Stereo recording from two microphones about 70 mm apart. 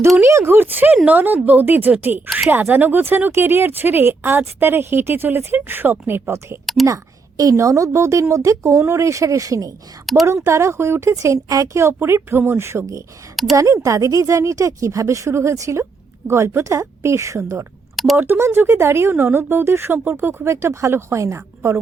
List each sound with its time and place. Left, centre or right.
0.2 s a woman's voice: right
6.8 s a sound: right
7.5 s speech: right
10.2 s speech: right
13.3 s speech: centre
13.6 s speech: right
17.9 s a sound: centre
18.2 s speech: right